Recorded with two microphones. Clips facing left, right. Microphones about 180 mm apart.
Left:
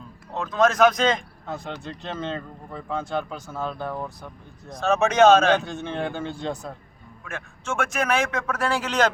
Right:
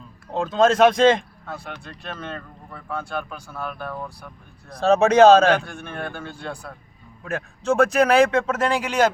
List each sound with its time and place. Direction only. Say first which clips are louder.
0.3 s speech: right 3 dB; 30° right (ahead or behind)
1.8 s speech: left 3 dB; 20° left (ahead or behind)
4.8 s speech: right 4 dB; 35° right (ahead or behind)
5.6 s speech: left 4 dB; 20° left (ahead or behind)
7.3 s speech: right 9 dB; 35° right (ahead or behind); by 9.1 s 10° right (ahead or behind)